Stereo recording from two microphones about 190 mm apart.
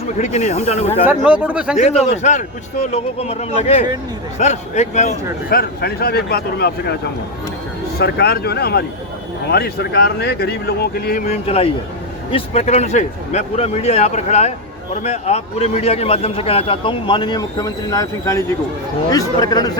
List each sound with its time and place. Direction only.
0.2 s a man's voice: 40° left (ahead or behind)
1.1 s speech: 5° right (ahead or behind)
1.8 s a man's voice: 35° left (ahead or behind)
5.5 s speech: 55° left (ahead or behind)
11.3 s a man's voice: 30° left (ahead or behind)